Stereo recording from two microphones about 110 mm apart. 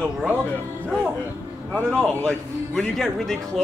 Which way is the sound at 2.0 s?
5° left (ahead or behind).